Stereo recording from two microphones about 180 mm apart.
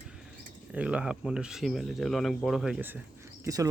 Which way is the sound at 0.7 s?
5° right (ahead or behind).